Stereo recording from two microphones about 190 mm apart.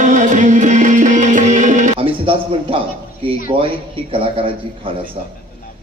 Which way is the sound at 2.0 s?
30° right (ahead or behind).